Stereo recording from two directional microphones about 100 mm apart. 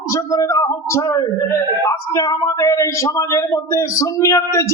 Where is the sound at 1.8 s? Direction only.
50° left (ahead or behind).